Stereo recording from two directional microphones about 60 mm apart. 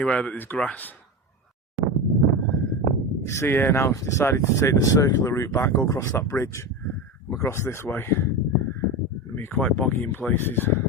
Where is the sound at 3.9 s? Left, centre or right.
Left.